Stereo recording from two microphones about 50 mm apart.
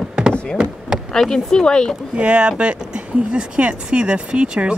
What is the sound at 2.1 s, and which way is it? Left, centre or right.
Speech, right.